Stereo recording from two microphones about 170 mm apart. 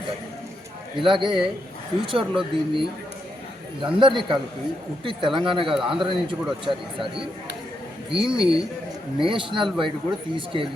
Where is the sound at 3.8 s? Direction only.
30° right (ahead or behind).